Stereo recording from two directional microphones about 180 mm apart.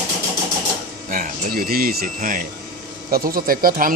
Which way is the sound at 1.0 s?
45° right (ahead or behind).